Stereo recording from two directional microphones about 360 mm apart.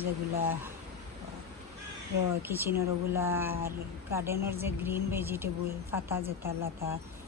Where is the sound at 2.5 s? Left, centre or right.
Centre.